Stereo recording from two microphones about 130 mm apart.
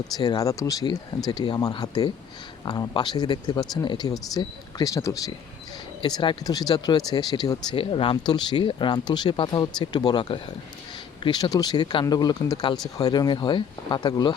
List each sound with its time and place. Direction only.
0.2 s speech: 30° left (ahead or behind)
7.8 s speech: 45° left (ahead or behind)